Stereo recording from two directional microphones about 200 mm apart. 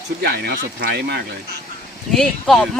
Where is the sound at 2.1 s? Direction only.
Centre (ahead or behind).